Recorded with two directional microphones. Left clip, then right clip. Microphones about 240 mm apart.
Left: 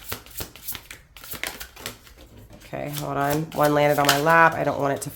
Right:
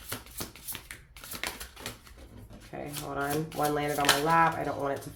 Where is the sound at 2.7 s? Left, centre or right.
Left.